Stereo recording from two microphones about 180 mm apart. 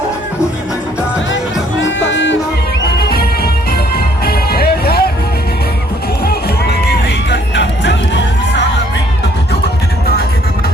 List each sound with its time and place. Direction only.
2.0 s music: 90° left
3.0 s music: 60° left (ahead or behind)
6.2 s music: 65° left (ahead or behind)